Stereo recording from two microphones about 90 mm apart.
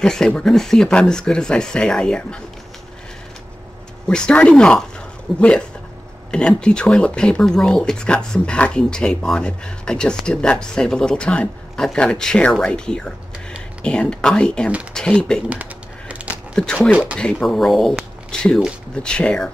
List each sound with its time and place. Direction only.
0.0 s speech: 10° left (ahead or behind)
4.1 s speech: 10° left (ahead or behind)
15.5 s typing: 15° right (ahead or behind)
16.5 s speech: 5° left (ahead or behind)
16.9 s speech: 10° right (ahead or behind)
17.2 s speech: 5° left (ahead or behind)